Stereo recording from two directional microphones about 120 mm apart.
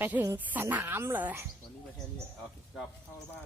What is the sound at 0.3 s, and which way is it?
A woman's voice, 15° right (ahead or behind).